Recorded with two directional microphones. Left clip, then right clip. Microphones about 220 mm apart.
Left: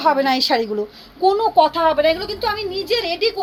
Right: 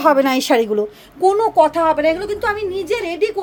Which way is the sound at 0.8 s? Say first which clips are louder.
Right 2 dB; 40° right (ahead or behind).